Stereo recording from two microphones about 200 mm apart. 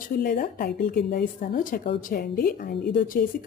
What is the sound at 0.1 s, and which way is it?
A woman's voice, 45° left (ahead or behind).